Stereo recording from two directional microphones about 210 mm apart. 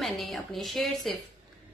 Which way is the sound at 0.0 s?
Centre (ahead or behind).